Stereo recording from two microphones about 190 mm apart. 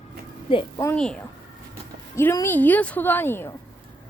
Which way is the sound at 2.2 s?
15° left (ahead or behind).